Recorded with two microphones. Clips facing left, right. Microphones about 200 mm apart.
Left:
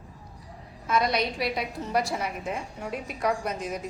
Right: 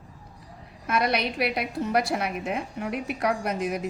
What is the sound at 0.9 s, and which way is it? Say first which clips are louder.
A woman's voice: even; 65° right (ahead or behind).